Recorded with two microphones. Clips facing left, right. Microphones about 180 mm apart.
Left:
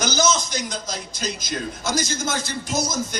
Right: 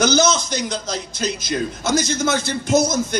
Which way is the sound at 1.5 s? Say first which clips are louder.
Right 7 dB; 55° right (ahead or behind).